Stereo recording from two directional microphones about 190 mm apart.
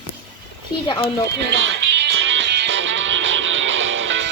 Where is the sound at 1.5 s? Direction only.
75° right (ahead or behind).